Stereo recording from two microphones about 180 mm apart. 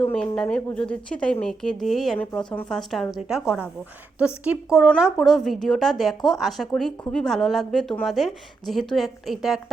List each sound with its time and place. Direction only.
0.2 s a woman's voice: 5° left (ahead or behind)